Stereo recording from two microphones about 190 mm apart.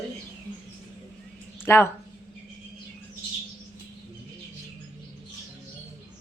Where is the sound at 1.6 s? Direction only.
10° left (ahead or behind).